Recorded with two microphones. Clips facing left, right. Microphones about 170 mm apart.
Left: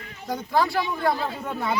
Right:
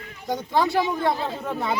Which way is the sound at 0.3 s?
20° right (ahead or behind).